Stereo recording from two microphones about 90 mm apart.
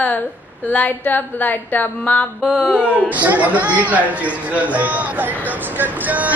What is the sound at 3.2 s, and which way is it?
Speech, 15° right (ahead or behind).